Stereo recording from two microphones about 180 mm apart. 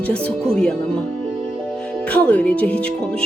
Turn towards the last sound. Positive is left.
turn(degrees=5)  # may be behind; listen again after turning